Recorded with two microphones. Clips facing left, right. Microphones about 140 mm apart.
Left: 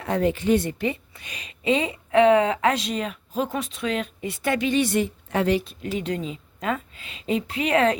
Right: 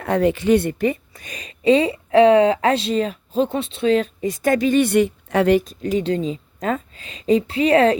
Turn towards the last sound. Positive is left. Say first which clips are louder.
# right 6 dB
turn(degrees=-35)  # may be behind; listen again after turning